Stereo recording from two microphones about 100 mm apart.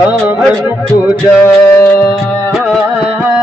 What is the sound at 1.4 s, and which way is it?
Music, 30° left (ahead or behind).